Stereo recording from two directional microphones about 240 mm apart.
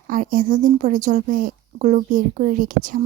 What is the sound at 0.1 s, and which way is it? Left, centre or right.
Speech, right.